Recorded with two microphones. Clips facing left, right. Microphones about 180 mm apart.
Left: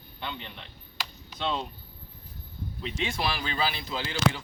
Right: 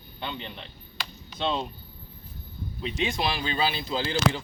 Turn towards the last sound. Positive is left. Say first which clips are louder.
# right 3 dB
turn(degrees=-30)  # may be behind; listen again after turning